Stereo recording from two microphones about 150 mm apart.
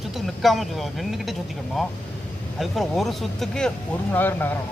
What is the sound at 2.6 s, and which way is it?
Speech, centre (ahead or behind).